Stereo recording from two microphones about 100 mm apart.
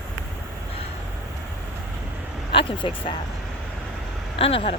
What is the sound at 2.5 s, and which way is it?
Speech, 60° left (ahead or behind).